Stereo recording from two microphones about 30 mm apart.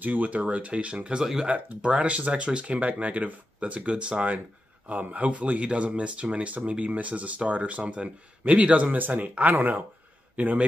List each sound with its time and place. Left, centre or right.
0.0 s speech: right
2.0 s speech: right
4.8 s speech: right
5.6 s speech: right
8.9 s speech: right
9.4 s speech: right
10.3 s a man's voice: right